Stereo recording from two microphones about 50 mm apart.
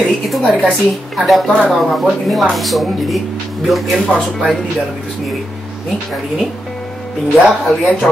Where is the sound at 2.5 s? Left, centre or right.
Centre.